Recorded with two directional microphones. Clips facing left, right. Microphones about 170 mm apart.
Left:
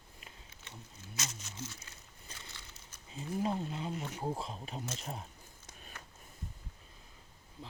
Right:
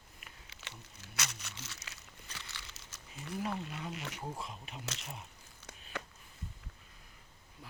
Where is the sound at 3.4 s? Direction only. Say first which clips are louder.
Left 4 dB; 30° left (ahead or behind).